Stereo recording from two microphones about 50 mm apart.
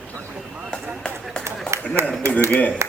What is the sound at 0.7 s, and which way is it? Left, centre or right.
Run, centre.